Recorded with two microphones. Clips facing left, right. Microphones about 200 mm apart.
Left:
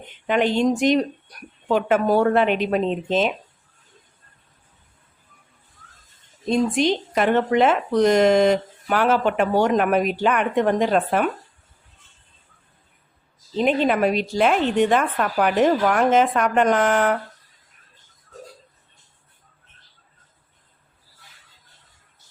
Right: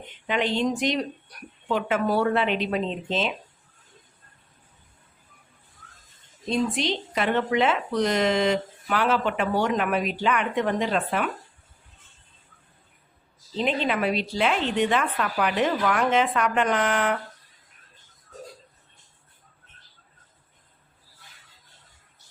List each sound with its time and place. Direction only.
0.3 s speech: 50° left (ahead or behind)
6.5 s speech: 45° left (ahead or behind)
13.6 s speech: 50° left (ahead or behind)